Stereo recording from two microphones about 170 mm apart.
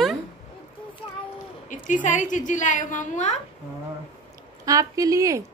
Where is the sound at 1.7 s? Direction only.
50° left (ahead or behind).